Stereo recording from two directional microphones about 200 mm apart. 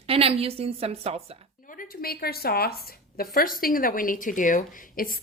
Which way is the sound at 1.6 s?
45° left (ahead or behind).